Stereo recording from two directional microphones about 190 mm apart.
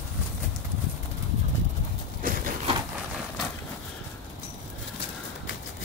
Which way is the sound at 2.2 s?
45° right (ahead or behind).